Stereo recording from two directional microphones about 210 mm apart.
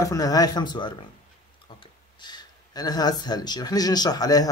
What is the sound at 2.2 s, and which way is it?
Speech, 20° left (ahead or behind).